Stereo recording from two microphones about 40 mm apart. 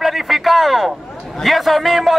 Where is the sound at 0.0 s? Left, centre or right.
Centre.